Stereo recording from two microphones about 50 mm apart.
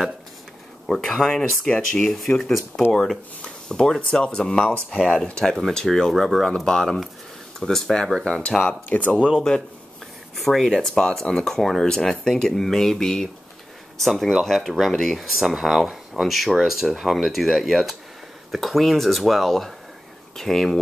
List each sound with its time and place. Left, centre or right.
0.8 s speech: centre
8.8 s speech: left
10.3 s speech: centre
10.7 s speech: centre